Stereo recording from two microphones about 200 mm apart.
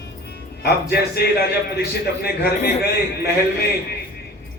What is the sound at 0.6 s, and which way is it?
A man's voice, 55° left (ahead or behind).